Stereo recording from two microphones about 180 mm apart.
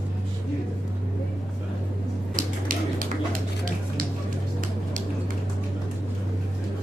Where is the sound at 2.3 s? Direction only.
50° right (ahead or behind).